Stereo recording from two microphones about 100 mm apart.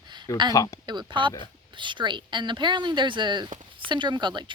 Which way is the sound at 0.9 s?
50° right (ahead or behind).